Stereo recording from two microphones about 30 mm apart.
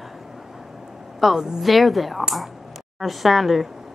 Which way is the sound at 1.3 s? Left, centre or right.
Right.